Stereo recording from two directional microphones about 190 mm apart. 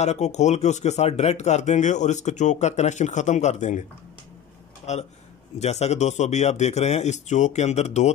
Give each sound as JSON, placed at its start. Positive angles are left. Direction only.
{"t": 0.0, "sound": "speech", "side_deg": 35}
{"t": 4.9, "sound": "speech", "side_deg": 35}